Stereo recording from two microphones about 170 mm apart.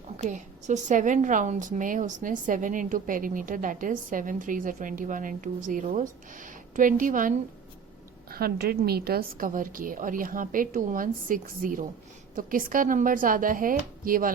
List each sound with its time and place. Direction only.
0.2 s a woman's voice: 45° right (ahead or behind)
8.3 s a woman's voice: 65° right (ahead or behind)